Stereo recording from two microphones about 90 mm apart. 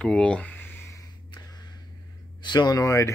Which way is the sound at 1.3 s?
50° left (ahead or behind).